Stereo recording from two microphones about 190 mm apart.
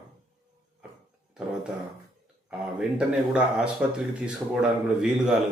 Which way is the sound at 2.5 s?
5° right (ahead or behind).